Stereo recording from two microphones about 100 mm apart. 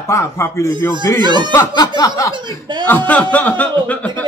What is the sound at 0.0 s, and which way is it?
Speech, 25° left (ahead or behind).